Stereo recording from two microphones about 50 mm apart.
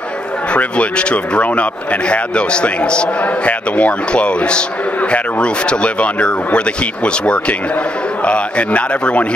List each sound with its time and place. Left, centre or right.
0.5 s a man's voice: left